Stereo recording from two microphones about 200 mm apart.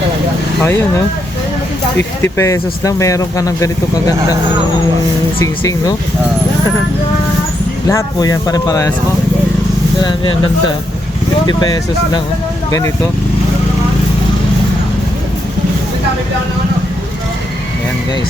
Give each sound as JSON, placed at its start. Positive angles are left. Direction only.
{"t": 2.0, "sound": "speech", "side_deg": 10}
{"t": 5.4, "sound": "speech", "side_deg": 15}
{"t": 7.9, "sound": "speech", "side_deg": 15}
{"t": 10.0, "sound": "speech", "side_deg": 25}
{"t": 11.4, "sound": "speech", "side_deg": 20}